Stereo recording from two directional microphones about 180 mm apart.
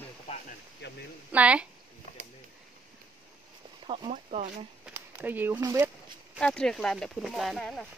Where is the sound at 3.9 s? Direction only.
30° right (ahead or behind).